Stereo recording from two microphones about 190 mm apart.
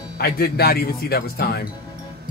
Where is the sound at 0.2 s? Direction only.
55° left (ahead or behind).